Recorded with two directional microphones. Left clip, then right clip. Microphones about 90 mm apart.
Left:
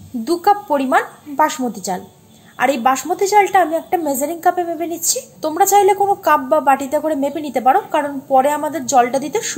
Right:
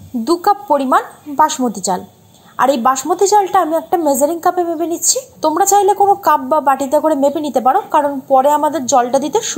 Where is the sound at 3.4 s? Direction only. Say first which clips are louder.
Right 1 dB; 20° left (ahead or behind).